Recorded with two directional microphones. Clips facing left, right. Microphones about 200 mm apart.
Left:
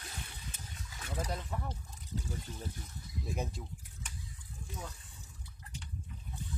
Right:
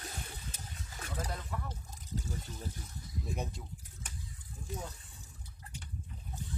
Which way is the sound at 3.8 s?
40° right (ahead or behind).